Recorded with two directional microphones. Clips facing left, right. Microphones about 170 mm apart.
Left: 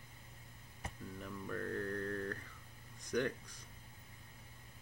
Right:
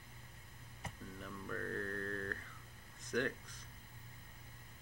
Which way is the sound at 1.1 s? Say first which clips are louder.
Left 2 dB; 10° left (ahead or behind).